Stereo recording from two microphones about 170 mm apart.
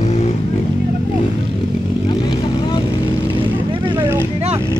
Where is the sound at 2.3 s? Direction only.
25° left (ahead or behind).